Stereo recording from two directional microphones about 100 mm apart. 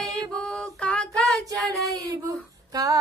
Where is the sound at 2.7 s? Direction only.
40° right (ahead or behind).